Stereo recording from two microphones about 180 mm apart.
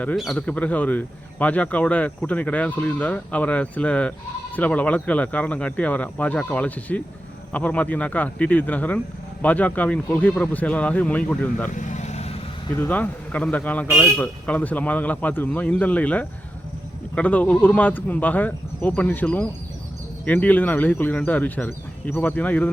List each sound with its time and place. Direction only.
0.0 s speech: 5° left (ahead or behind)
11.7 s vehicle: 45° left (ahead or behind)
12.7 s speech: 10° left (ahead or behind)